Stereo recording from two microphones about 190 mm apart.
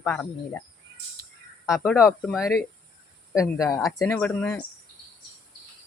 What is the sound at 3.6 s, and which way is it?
Speech, 15° left (ahead or behind).